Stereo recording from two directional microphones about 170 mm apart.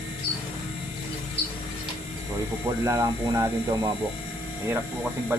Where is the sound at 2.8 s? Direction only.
20° right (ahead or behind).